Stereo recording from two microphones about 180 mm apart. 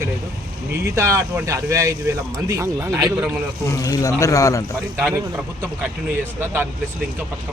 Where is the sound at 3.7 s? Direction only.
20° left (ahead or behind).